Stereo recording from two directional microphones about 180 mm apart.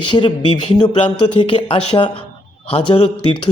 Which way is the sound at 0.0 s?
25° left (ahead or behind).